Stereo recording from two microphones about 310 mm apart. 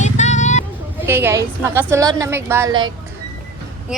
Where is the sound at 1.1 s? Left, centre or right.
Centre.